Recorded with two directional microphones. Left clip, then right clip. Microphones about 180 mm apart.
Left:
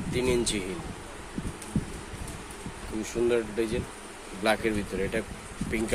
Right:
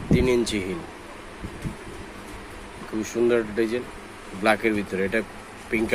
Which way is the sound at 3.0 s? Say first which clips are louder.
Right 5 dB; centre (ahead or behind).